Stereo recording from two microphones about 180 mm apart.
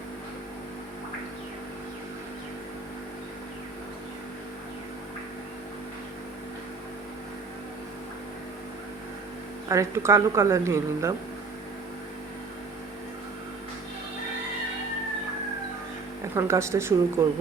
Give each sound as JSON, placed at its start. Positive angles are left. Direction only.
{"t": 9.6, "sound": "a woman's voice", "side_deg": -15}
{"t": 16.3, "sound": "a woman's voice", "side_deg": -15}